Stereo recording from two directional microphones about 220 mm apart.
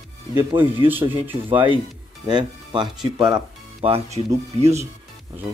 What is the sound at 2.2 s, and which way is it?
Speech, 20° right (ahead or behind).